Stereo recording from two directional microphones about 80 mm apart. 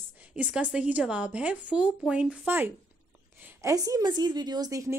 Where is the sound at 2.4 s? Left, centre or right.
Right.